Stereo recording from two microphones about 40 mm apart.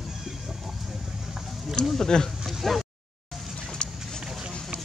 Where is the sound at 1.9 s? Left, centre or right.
Centre.